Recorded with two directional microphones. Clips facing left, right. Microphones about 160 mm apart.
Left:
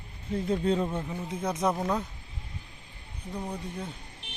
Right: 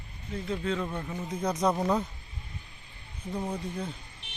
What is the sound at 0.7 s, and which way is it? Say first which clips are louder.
Speech: left 4 dB; 30° left (ahead or behind).